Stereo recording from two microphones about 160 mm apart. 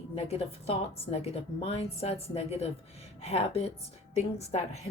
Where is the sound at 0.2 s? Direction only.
40° left (ahead or behind).